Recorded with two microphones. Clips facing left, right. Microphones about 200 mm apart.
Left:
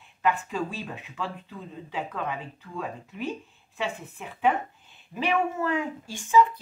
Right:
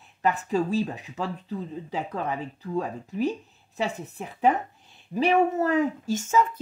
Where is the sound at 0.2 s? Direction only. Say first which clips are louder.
Right 3 dB; 40° right (ahead or behind).